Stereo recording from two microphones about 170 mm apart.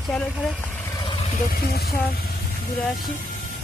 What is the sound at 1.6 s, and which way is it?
Speech, 70° left (ahead or behind).